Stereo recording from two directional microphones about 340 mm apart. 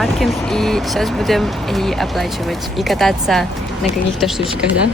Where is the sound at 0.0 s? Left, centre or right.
Centre.